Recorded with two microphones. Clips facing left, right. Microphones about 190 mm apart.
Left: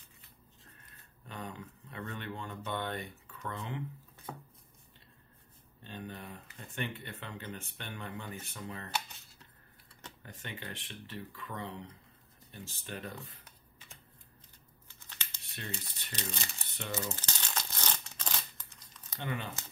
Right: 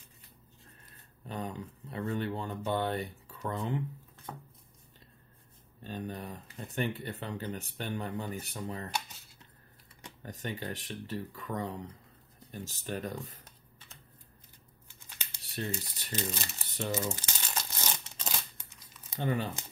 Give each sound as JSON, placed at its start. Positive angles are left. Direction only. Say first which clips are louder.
{"t": 0.8, "sound": "speech", "louder": "right 7 dB", "side_deg": -35}
{"t": 5.9, "sound": "speech", "louder": "right 5 dB", "side_deg": -40}
{"t": 10.2, "sound": "speech", "louder": "right 7 dB", "side_deg": -40}
{"t": 14.9, "sound": "tearing", "louder": "even", "side_deg": -15}
{"t": 15.5, "sound": "speech", "louder": "right 7 dB", "side_deg": -40}
{"t": 17.1, "sound": "crumpling", "louder": "right 2 dB", "side_deg": -10}
{"t": 19.1, "sound": "speech", "louder": "right 7 dB", "side_deg": -35}